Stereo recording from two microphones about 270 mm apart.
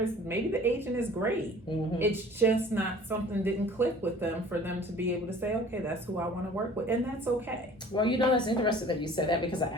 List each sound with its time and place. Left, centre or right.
0.0 s a woman's voice: centre
7.9 s a woman's voice: centre